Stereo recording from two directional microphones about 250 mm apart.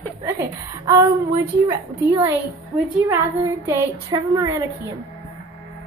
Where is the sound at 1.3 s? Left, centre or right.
Centre.